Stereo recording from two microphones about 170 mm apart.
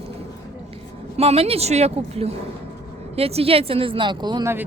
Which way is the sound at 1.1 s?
35° right (ahead or behind).